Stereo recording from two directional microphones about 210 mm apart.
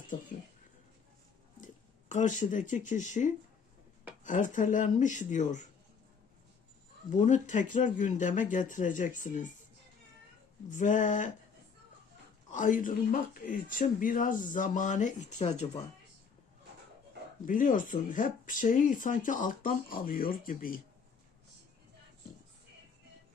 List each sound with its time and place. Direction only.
1.6 s speech: 35° left (ahead or behind)
7.1 s speech: 35° left (ahead or behind)
10.7 s speech: 35° left (ahead or behind)
12.5 s speech: 40° left (ahead or behind)
17.4 s speech: 40° left (ahead or behind)